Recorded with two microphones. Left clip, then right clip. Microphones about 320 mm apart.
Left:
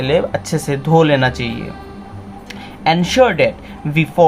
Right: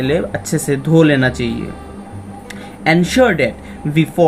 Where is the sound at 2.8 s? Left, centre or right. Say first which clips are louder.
Even; centre.